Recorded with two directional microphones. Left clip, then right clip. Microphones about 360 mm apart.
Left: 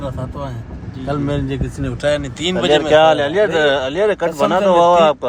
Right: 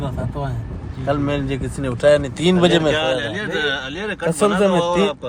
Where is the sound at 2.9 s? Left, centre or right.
Centre.